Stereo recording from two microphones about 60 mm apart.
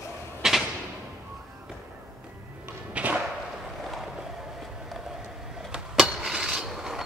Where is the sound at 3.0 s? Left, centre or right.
Right.